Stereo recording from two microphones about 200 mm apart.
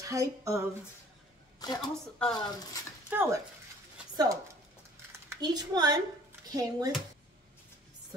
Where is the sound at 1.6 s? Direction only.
20° left (ahead or behind).